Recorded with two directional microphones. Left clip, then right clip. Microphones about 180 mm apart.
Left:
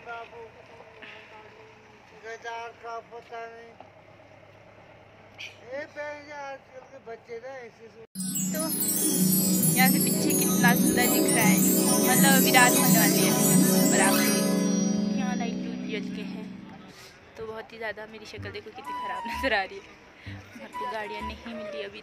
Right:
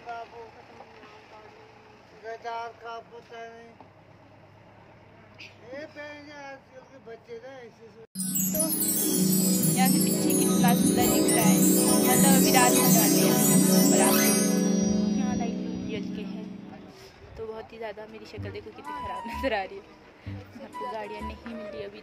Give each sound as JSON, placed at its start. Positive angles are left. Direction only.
{"t": 2.2, "sound": "vehicle", "side_deg": -55}
{"t": 8.2, "sound": "music", "side_deg": 0}
{"t": 15.2, "sound": "music", "side_deg": 15}
{"t": 17.4, "sound": "a woman's voice", "side_deg": 10}
{"t": 18.9, "sound": "music", "side_deg": 5}